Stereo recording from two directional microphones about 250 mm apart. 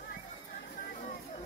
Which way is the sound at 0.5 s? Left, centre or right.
Left.